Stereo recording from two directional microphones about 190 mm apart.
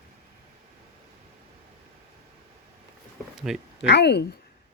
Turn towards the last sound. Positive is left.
turn(degrees=60)  # may be behind; listen again after turning